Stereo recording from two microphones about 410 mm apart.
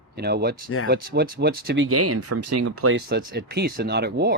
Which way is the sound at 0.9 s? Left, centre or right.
Right.